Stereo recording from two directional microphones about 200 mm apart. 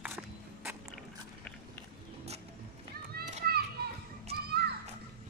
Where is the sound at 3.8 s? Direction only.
50° right (ahead or behind).